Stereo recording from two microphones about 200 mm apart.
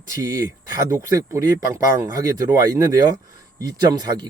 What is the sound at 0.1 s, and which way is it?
Speech, 15° right (ahead or behind).